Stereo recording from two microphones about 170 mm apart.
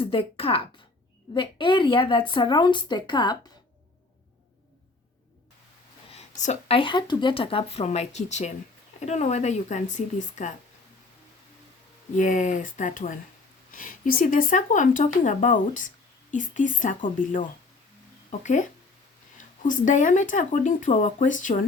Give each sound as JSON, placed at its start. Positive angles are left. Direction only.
{"t": 0.0, "sound": "speech", "side_deg": 35}
{"t": 6.1, "sound": "speech", "side_deg": 40}
{"t": 12.1, "sound": "speech", "side_deg": 50}
{"t": 18.3, "sound": "speech", "side_deg": 45}
{"t": 19.6, "sound": "speech", "side_deg": 50}